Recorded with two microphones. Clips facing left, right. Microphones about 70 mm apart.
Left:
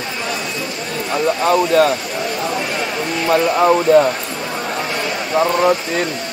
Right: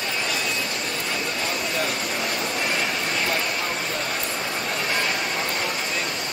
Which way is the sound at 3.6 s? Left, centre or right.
Left.